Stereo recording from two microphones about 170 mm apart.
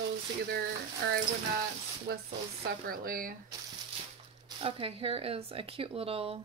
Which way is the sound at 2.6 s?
60° right (ahead or behind).